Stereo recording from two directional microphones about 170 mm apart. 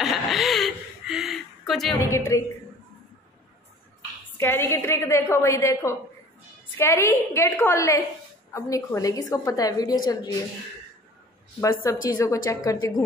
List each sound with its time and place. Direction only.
0.0 s a sound: centre (ahead or behind)
2.0 s a woman's voice: 15° left (ahead or behind)
4.4 s a woman's voice: 15° left (ahead or behind)
11.8 s a woman's voice: 15° left (ahead or behind)